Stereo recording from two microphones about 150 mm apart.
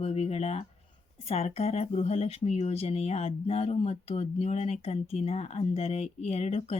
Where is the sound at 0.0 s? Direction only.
40° left (ahead or behind).